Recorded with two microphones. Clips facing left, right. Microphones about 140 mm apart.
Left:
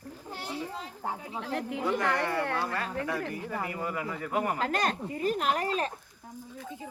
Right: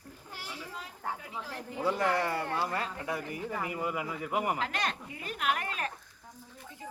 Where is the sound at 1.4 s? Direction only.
75° left (ahead or behind).